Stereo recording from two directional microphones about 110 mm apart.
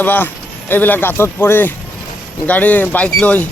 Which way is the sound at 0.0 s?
20° left (ahead or behind).